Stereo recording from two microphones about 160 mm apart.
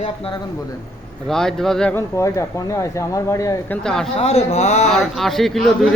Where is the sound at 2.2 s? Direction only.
20° left (ahead or behind).